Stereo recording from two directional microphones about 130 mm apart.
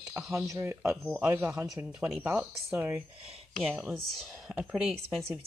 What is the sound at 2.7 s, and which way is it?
Speech, 20° right (ahead or behind).